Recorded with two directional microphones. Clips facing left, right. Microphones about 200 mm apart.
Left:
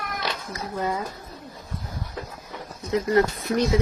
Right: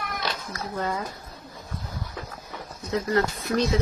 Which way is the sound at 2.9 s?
20° left (ahead or behind).